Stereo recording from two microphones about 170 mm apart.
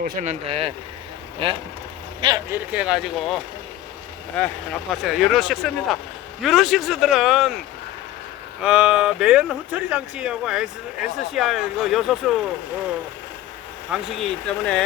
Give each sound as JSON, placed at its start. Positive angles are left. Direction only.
{"t": 0.0, "sound": "speech", "side_deg": -50}
{"t": 2.5, "sound": "speech", "side_deg": -5}
{"t": 8.6, "sound": "speech", "side_deg": -5}
{"t": 13.9, "sound": "speech", "side_deg": 0}